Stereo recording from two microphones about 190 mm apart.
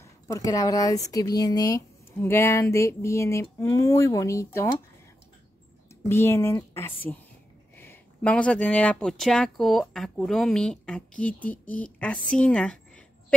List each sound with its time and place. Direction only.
0.0 s speech: 15° left (ahead or behind)
6.0 s speech: 15° left (ahead or behind)